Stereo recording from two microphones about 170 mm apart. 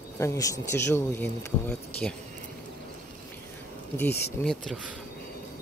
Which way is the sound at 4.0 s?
10° left (ahead or behind).